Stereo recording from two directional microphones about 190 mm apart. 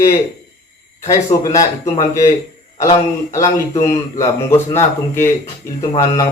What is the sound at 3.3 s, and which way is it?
Speech, 15° left (ahead or behind).